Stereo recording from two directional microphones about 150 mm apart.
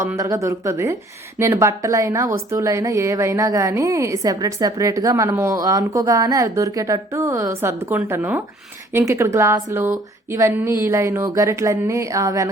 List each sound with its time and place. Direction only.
0.2 s a woman's voice: 20° right (ahead or behind)